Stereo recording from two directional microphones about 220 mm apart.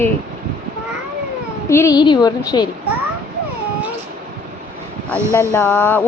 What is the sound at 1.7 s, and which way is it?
Speech, 15° left (ahead or behind).